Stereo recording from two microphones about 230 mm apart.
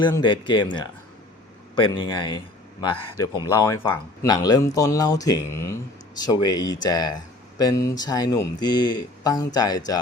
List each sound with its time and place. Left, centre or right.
0.0 s speech: centre